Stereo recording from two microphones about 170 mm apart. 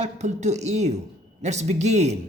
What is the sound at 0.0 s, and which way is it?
Speech, 40° right (ahead or behind).